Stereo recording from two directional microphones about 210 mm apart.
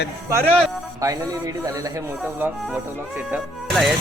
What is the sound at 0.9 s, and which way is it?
Speech, 15° right (ahead or behind).